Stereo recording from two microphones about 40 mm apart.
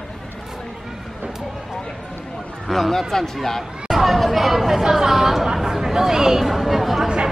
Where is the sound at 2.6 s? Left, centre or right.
Centre.